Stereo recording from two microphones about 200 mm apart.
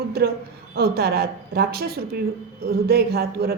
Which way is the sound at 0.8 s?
50° right (ahead or behind).